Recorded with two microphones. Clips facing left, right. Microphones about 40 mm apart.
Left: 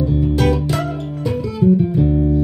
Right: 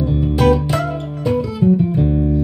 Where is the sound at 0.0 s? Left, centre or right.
Right.